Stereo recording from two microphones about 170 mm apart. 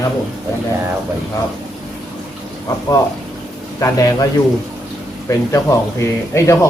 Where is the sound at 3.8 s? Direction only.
20° left (ahead or behind).